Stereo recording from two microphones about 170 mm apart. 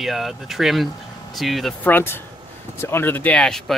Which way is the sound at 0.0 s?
Centre (ahead or behind).